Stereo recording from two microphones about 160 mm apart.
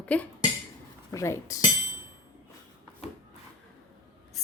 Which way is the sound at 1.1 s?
15° left (ahead or behind).